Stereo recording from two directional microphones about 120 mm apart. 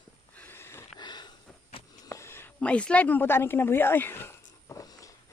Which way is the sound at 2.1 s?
20° left (ahead or behind).